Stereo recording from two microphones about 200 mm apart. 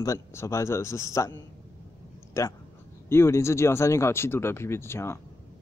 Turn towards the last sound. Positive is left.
turn(degrees=10)  # may be behind; listen again after turning